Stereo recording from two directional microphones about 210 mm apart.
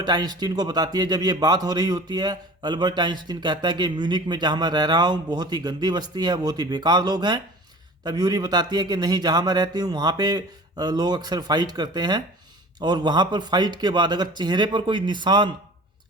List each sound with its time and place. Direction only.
0.0 s a man's voice: 20° right (ahead or behind)